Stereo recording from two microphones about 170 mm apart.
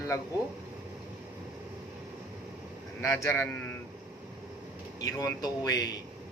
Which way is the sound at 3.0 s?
15° left (ahead or behind).